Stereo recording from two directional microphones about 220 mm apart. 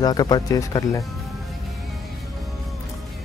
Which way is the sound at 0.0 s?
20° left (ahead or behind).